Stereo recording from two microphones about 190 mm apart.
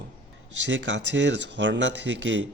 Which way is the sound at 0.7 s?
70° right (ahead or behind).